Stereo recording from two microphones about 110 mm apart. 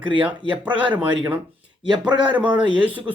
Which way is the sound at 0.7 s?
10° right (ahead or behind).